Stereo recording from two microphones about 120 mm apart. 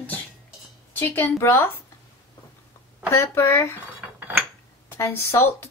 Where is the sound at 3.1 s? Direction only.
20° left (ahead or behind).